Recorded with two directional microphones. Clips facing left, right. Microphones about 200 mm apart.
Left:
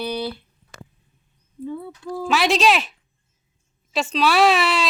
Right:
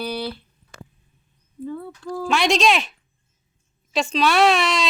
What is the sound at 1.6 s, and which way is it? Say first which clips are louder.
Speech: even; 5° left (ahead or behind).